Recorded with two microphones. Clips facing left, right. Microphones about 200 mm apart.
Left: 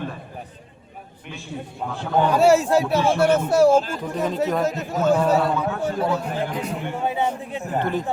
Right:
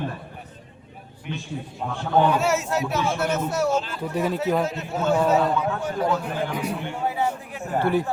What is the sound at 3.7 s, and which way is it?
Speech, 45° left (ahead or behind).